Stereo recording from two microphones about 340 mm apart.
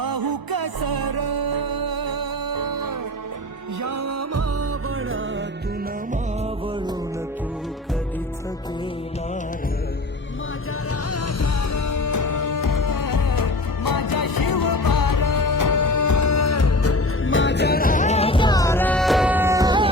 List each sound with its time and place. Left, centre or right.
0.0 s music: right
3.8 s music: right
11.1 s music: left; by 19.9 s centre